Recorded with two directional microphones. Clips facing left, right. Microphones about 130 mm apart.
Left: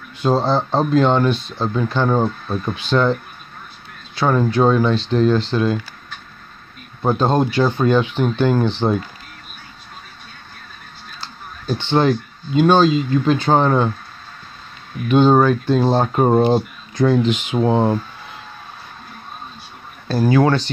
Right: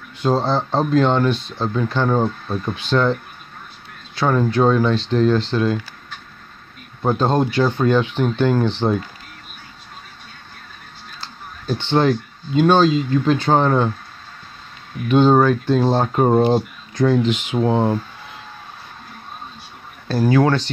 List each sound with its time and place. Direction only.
0.2 s speech: 10° left (ahead or behind)
7.0 s speech: 10° left (ahead or behind)
11.1 s speech: 5° left (ahead or behind)
15.0 s speech: 5° left (ahead or behind)
17.2 s speech: 25° left (ahead or behind)
20.1 s speech: 15° left (ahead or behind)